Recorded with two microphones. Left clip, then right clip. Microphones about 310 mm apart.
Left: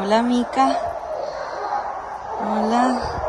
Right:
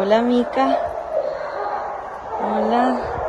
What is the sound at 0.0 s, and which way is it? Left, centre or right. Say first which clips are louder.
Speech: right 2 dB; centre.